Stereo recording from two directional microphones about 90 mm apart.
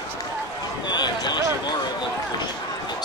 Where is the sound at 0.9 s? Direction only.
55° left (ahead or behind).